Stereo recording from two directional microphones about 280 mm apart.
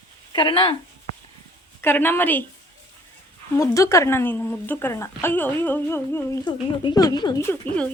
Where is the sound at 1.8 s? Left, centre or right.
Centre.